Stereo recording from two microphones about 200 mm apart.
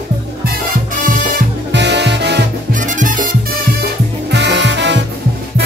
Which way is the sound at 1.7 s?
60° right (ahead or behind).